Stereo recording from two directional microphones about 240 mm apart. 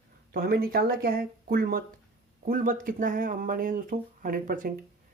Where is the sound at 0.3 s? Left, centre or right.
Right.